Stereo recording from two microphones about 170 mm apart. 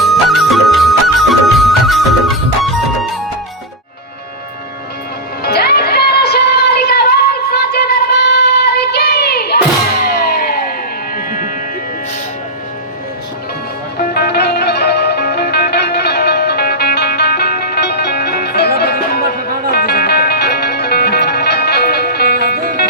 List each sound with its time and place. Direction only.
0.0 s music: centre (ahead or behind)
5.4 s music: 70° left (ahead or behind); by 11.5 s 55° left (ahead or behind)
14.1 s music: 70° left (ahead or behind)
22.5 s music: 55° right (ahead or behind)